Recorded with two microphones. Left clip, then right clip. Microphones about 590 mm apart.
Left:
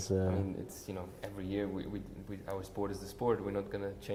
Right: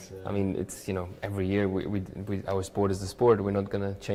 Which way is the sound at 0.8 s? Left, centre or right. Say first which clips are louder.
Right 9 dB; right.